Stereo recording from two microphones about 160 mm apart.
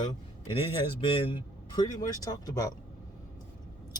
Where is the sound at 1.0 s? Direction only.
30° left (ahead or behind).